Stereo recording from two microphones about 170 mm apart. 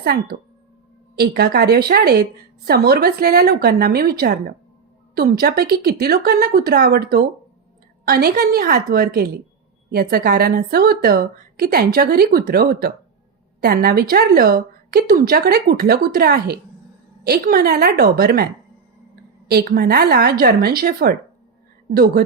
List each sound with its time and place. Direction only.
0.0 s a woman's voice: 65° right (ahead or behind)
19.5 s a woman's voice: 65° right (ahead or behind)